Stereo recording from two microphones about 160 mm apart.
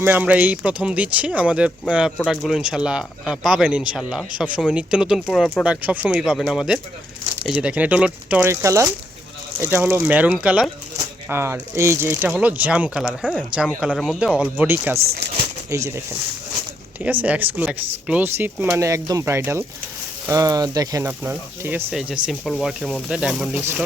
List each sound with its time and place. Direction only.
0.0 s speech: 10° right (ahead or behind)
17.0 s speech: 10° right (ahead or behind)